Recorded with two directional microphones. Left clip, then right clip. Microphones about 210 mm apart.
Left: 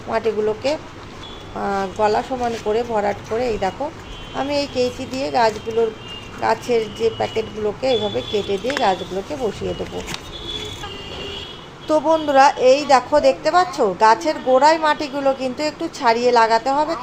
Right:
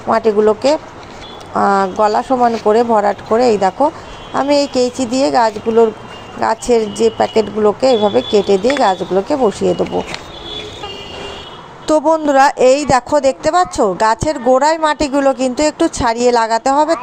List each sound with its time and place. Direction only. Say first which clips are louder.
0.1 s a woman's voice: right 8 dB; 35° right (ahead or behind)
11.9 s a woman's voice: right 5 dB; 40° right (ahead or behind)